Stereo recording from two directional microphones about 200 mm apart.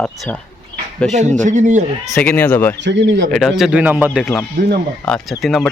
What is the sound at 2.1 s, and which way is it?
Speech, 5° left (ahead or behind).